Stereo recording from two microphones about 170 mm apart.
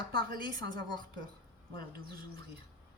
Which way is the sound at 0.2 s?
60° right (ahead or behind).